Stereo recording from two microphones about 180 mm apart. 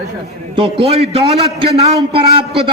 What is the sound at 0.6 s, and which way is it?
A man's voice, 30° right (ahead or behind).